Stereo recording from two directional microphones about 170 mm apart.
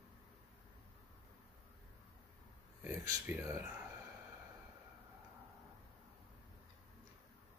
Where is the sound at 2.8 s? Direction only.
15° right (ahead or behind).